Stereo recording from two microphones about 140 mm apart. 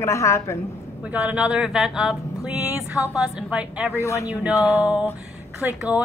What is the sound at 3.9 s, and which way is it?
Female singing, 20° left (ahead or behind).